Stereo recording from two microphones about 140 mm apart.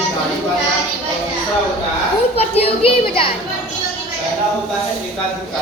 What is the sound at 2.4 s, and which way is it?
Speech, 45° left (ahead or behind).